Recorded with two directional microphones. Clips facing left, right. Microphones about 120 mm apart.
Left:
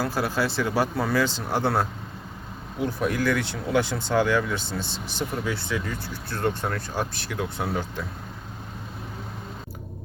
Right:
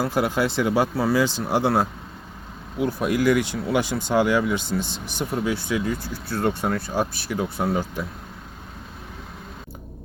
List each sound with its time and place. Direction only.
0.0 s speech: 20° right (ahead or behind)
3.0 s speech: 15° right (ahead or behind)